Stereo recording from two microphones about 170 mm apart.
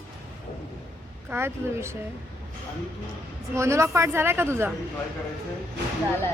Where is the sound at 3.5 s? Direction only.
15° right (ahead or behind).